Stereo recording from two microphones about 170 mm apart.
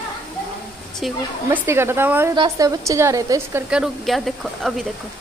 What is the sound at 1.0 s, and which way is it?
Speech, 10° right (ahead or behind).